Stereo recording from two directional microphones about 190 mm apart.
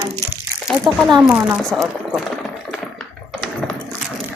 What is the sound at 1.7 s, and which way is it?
Speech, centre (ahead or behind).